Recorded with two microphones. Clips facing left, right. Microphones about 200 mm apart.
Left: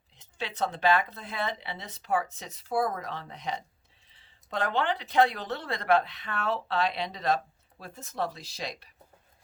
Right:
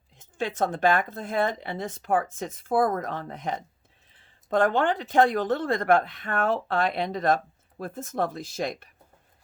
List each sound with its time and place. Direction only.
0.2 s speech: 50° right (ahead or behind)